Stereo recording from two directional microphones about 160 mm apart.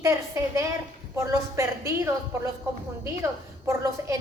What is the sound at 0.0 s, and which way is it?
A woman's voice, 20° right (ahead or behind).